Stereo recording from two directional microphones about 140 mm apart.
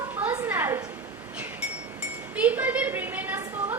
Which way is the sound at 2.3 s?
10° right (ahead or behind).